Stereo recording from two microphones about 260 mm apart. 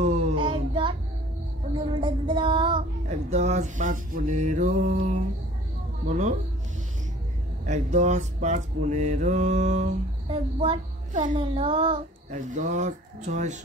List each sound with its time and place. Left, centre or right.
0.0 s child singing: right
2.0 s music: centre
6.0 s mantra: right
7.6 s mantra: right